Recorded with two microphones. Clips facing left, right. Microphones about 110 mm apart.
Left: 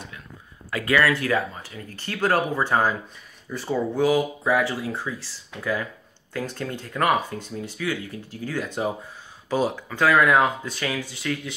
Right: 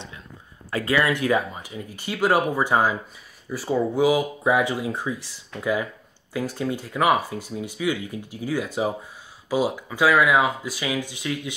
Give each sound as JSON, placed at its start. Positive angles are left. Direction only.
{"t": 0.7, "sound": "speech", "side_deg": -30}